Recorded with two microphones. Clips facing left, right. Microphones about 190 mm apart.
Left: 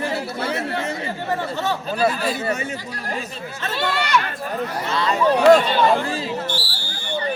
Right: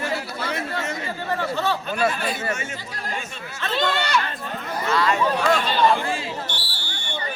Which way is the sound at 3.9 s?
25° right (ahead or behind).